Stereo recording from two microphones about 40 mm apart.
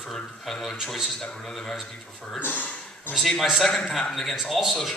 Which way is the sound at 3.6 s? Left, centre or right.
Centre.